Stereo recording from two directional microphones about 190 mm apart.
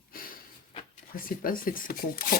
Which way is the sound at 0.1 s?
50° left (ahead or behind).